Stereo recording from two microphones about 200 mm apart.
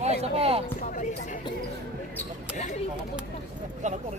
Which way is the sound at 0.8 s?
40° left (ahead or behind).